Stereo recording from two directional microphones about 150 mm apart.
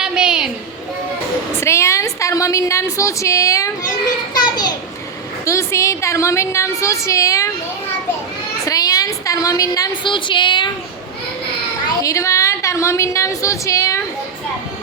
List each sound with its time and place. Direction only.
0.0 s a sound: 5° right (ahead or behind)
1.5 s a woman's voice: 20° left (ahead or behind)
8.6 s a woman's voice: 25° left (ahead or behind)
12.0 s a woman's voice: 20° left (ahead or behind)